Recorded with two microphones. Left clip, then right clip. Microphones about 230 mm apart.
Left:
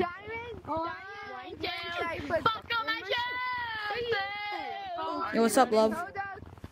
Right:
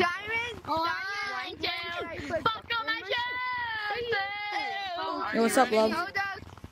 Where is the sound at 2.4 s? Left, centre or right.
Centre.